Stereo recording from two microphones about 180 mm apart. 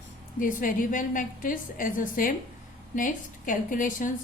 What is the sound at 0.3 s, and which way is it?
A woman's voice, 50° left (ahead or behind).